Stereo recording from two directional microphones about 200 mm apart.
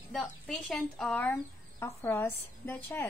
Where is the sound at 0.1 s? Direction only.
Centre (ahead or behind).